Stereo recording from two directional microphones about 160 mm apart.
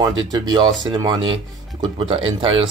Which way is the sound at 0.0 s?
25° right (ahead or behind).